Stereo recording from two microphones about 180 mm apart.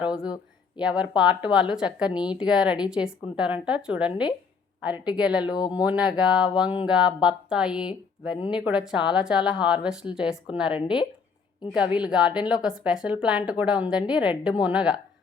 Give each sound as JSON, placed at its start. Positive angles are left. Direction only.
{"t": 0.0, "sound": "a woman's voice", "side_deg": -5}
{"t": 4.1, "sound": "speech", "side_deg": 25}
{"t": 4.8, "sound": "a woman's voice", "side_deg": -5}